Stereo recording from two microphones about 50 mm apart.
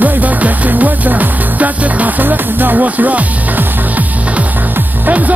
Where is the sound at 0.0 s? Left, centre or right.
Right.